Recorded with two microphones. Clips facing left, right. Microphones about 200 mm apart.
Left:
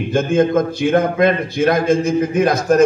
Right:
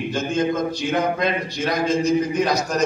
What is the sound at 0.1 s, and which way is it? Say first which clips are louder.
A man's voice: left 9 dB; 55° left (ahead or behind).